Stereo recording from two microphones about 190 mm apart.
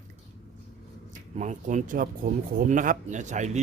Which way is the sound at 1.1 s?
40° right (ahead or behind).